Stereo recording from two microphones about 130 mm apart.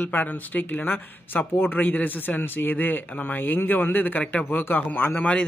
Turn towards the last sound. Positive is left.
turn(degrees=10)  # may be behind; listen again after turning